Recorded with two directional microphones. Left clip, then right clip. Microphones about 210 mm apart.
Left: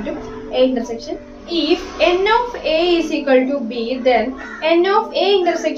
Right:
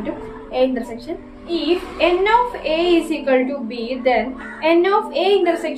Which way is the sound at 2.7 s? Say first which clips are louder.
Left 4 dB; 15° right (ahead or behind).